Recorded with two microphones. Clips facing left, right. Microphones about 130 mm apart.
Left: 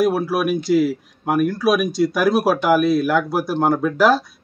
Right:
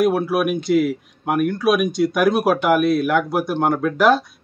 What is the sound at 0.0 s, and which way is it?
Speech, centre (ahead or behind).